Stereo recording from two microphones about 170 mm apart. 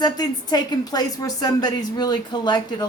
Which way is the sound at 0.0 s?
25° left (ahead or behind).